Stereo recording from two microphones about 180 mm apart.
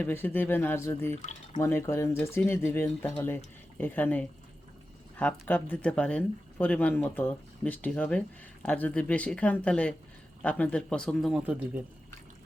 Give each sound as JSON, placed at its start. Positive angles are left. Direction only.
{"t": 0.0, "sound": "speech", "side_deg": 10}
{"t": 1.2, "sound": "speech", "side_deg": 40}
{"t": 1.6, "sound": "speech", "side_deg": 15}